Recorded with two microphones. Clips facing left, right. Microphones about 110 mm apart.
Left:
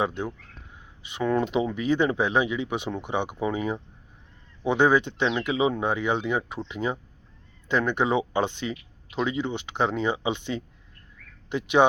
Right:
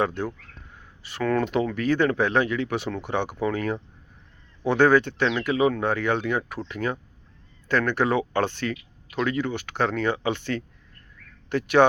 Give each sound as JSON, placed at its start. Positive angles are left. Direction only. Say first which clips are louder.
{"t": 0.0, "sound": "speech", "louder": "right 2 dB", "side_deg": 20}